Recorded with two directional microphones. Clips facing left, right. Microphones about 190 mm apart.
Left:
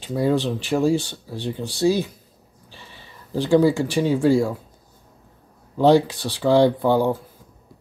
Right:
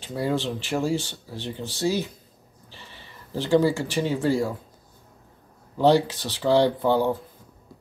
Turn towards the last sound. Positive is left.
turn(degrees=15)  # may be behind; listen again after turning